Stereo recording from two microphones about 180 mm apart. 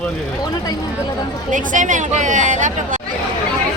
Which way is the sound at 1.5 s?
45° right (ahead or behind).